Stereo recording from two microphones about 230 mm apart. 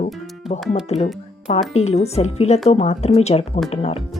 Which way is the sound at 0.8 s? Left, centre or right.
Left.